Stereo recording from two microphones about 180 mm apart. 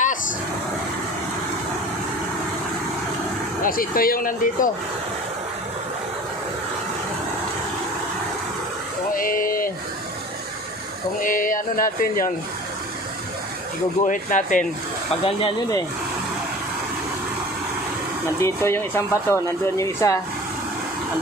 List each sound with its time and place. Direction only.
3.6 s speech: 50° left (ahead or behind)
9.1 s speech: 50° left (ahead or behind)
11.2 s speech: 50° left (ahead or behind)
14.0 s speech: 45° left (ahead or behind)
15.2 s speech: 30° left (ahead or behind)
18.3 s speech: 15° left (ahead or behind)